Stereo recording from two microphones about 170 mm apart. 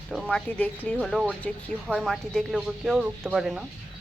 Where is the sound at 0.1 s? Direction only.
Centre (ahead or behind).